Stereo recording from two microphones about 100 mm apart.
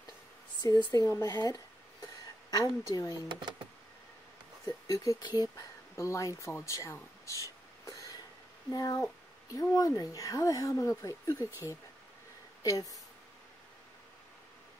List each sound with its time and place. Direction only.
0.6 s a woman's voice: 50° left (ahead or behind)
1.0 s speech: 30° left (ahead or behind)
2.9 s speech: 35° left (ahead or behind)
3.3 s speech: 50° right (ahead or behind)
4.6 s speech: 35° left (ahead or behind)
8.6 s speech: 35° left (ahead or behind)
12.6 s speech: 35° left (ahead or behind)